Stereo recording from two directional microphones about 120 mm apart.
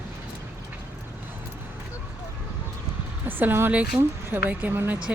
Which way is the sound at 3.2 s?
15° right (ahead or behind).